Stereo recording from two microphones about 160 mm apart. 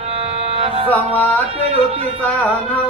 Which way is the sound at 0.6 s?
40° right (ahead or behind).